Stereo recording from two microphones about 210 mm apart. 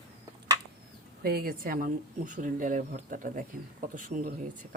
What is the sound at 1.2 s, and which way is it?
Speech, 45° right (ahead or behind).